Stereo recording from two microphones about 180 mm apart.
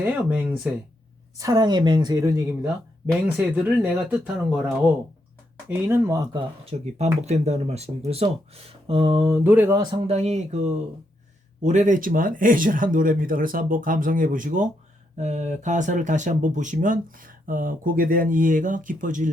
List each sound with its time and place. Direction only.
0.0 s speech: 10° right (ahead or behind)
1.4 s a woman's voice: 20° right (ahead or behind); by 4.6 s 5° right (ahead or behind)
5.6 s speech: 15° right (ahead or behind)
6.7 s speech: 40° right (ahead or behind)
9.2 s speech: 10° right (ahead or behind)
9.8 s speech: 35° right (ahead or behind)